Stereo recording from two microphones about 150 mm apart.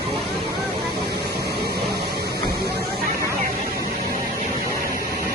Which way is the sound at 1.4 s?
90° right.